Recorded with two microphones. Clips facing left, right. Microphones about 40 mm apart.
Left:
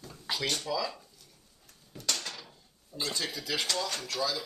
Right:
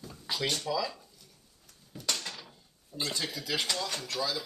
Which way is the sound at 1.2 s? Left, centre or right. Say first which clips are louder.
Even; centre.